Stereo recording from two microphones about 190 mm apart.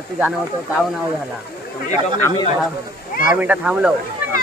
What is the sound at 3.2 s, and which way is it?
Speech, 10° right (ahead or behind).